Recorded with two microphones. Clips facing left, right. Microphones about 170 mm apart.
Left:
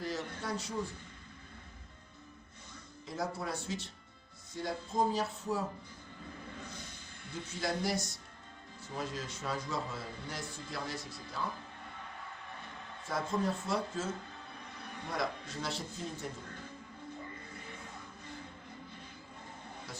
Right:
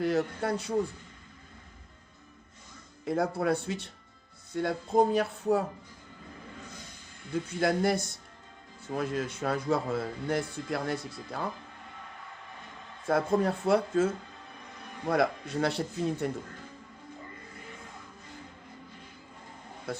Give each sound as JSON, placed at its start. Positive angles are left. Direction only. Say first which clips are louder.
{"t": 0.0, "sound": "a man's voice", "louder": "right 10 dB", "side_deg": -60}
{"t": 3.0, "sound": "a man's voice", "louder": "right 9 dB", "side_deg": -60}
{"t": 7.3, "sound": "a man's voice", "louder": "right 9 dB", "side_deg": -60}
{"t": 13.1, "sound": "a man's voice", "louder": "right 8 dB", "side_deg": -60}
{"t": 19.9, "sound": "a man's voice", "louder": "right 15 dB", "side_deg": -60}